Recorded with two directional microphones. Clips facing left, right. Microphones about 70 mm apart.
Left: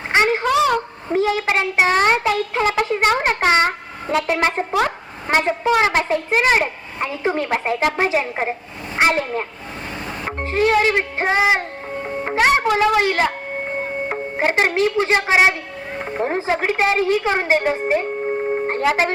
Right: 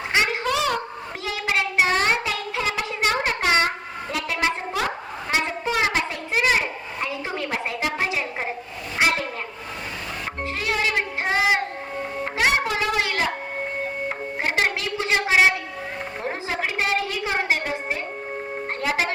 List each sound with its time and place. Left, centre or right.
0.1 s a sound: left
1.1 s a child's voice: left
5.9 s a child's voice: left
10.2 s music: left
12.2 s a child's voice: left